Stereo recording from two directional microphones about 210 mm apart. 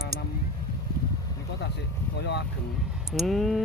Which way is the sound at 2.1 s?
55° left (ahead or behind).